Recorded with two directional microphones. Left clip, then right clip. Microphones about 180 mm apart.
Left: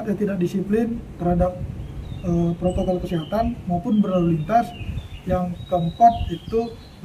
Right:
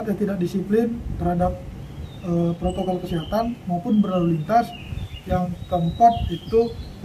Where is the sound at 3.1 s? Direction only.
20° left (ahead or behind).